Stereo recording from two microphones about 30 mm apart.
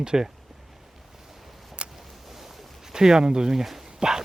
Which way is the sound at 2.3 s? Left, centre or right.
Centre.